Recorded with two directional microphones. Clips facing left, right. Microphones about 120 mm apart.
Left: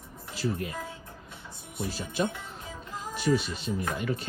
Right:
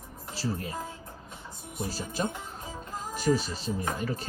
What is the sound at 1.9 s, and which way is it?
Speech, 40° right (ahead or behind).